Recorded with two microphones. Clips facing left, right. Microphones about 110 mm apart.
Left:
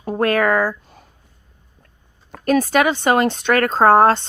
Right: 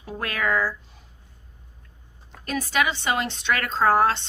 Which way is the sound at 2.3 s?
50° left (ahead or behind).